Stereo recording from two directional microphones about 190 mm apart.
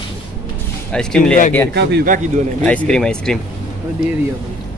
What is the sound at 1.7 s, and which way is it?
Speech, 65° right (ahead or behind).